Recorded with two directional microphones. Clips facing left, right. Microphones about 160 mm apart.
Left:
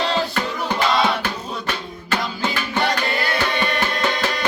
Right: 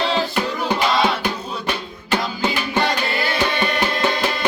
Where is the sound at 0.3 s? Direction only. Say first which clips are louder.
Right 2 dB; 15° right (ahead or behind).